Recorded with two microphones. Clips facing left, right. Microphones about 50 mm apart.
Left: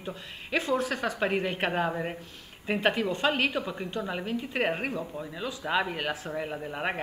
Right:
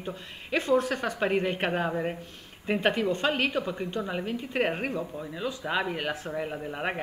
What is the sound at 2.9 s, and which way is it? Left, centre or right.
Speech, left.